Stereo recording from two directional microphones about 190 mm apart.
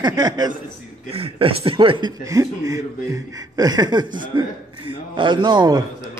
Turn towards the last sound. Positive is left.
turn(degrees=-20)  # may be behind; listen again after turning